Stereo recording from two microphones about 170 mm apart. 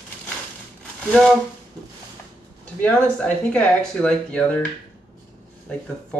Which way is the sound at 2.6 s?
10° left (ahead or behind).